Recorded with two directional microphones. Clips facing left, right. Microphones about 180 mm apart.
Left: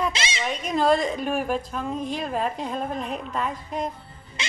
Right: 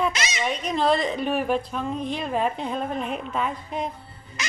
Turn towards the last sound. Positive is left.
turn(degrees=30)  # may be behind; listen again after turning